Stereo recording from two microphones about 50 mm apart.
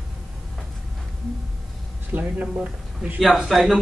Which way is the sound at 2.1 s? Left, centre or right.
Right.